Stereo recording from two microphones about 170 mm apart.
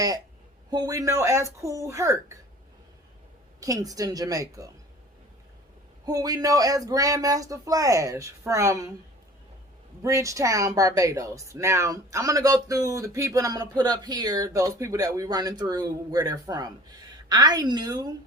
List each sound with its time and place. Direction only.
0.7 s speech: 20° right (ahead or behind)
3.6 s speech: 20° right (ahead or behind)
6.1 s speech: 20° right (ahead or behind)
10.0 s speech: 20° right (ahead or behind)